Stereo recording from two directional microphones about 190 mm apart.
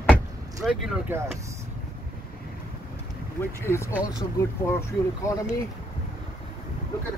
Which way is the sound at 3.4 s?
10° left (ahead or behind).